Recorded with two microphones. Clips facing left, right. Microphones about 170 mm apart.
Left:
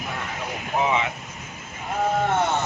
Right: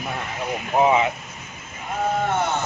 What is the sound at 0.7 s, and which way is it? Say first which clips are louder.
Speech: right 5 dB; 40° right (ahead or behind).